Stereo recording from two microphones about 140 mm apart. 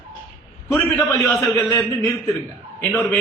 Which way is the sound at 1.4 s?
20° left (ahead or behind).